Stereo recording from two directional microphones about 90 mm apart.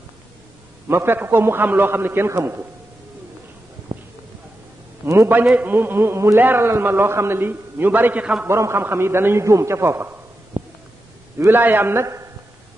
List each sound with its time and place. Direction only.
0.8 s a man's voice: 25° right (ahead or behind)
3.9 s a sound: 80° right
5.0 s a man's voice: 30° right (ahead or behind); by 8.5 s 15° right (ahead or behind)
8.5 s a man's voice: 30° right (ahead or behind)
10.6 s a sound: 90° right
11.3 s a man's voice: 25° right (ahead or behind)